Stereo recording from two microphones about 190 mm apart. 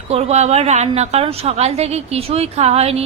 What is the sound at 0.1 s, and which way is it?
A woman's voice, 35° right (ahead or behind).